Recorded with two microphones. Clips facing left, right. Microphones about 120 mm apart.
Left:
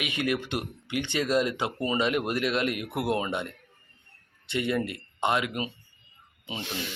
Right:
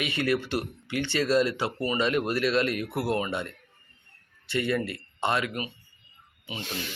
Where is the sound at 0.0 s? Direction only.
15° left (ahead or behind).